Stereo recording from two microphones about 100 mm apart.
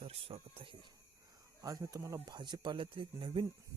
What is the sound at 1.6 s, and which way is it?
Speech, 35° right (ahead or behind).